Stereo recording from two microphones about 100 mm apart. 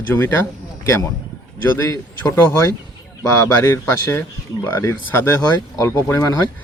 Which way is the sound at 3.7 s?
25° left (ahead or behind).